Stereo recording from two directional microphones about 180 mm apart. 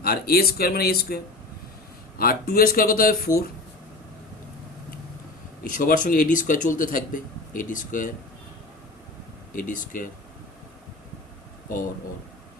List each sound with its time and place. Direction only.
0.0 s speech: 60° left (ahead or behind)
5.6 s speech: 50° left (ahead or behind)
9.6 s speech: 45° left (ahead or behind)